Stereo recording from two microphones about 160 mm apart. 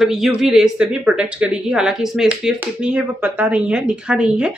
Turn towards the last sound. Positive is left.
turn(degrees=-5)  # may be behind; listen again after turning